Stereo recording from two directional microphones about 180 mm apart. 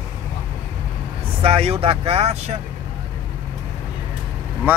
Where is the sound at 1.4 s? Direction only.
30° right (ahead or behind).